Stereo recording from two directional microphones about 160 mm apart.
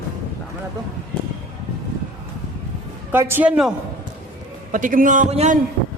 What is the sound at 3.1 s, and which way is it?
Speech, 10° right (ahead or behind).